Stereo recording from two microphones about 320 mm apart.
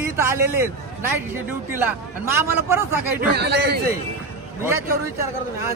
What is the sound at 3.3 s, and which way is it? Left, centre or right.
Speech, right.